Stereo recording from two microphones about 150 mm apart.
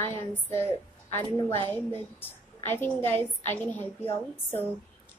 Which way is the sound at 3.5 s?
15° left (ahead or behind).